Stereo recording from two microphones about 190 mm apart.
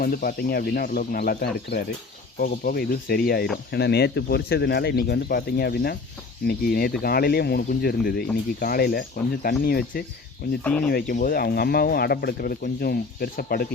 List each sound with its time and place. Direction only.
0.0 s speech: 50° left (ahead or behind)
10.6 s speech: 5° left (ahead or behind)
10.8 s speech: 50° left (ahead or behind)